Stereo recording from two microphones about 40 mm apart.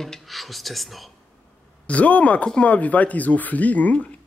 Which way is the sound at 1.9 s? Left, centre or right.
Left.